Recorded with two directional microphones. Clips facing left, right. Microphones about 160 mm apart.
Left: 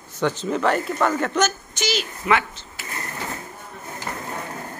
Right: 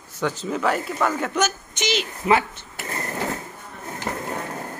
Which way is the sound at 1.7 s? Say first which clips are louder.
Right 1 dB; 20° right (ahead or behind).